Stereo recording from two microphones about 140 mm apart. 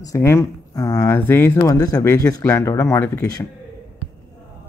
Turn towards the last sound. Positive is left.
turn(degrees=15)  # may be behind; listen again after turning